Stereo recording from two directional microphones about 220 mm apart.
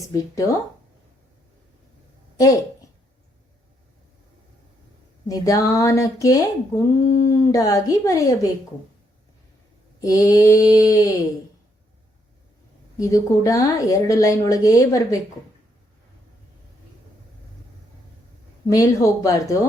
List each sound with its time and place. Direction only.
0.1 s a woman's voice: 15° left (ahead or behind)
5.3 s a woman's voice: 15° left (ahead or behind)
10.0 s a woman's voice: 15° left (ahead or behind)
13.0 s a woman's voice: 15° left (ahead or behind)
18.7 s a woman's voice: 15° left (ahead or behind)